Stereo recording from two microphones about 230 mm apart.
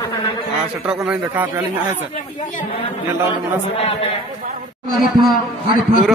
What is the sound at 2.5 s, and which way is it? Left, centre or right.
A man's voice, left.